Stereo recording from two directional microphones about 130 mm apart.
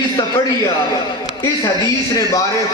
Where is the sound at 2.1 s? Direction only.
25° left (ahead or behind).